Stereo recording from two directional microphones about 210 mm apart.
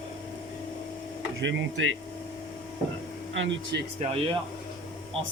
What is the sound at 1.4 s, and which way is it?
Speech, 60° right (ahead or behind).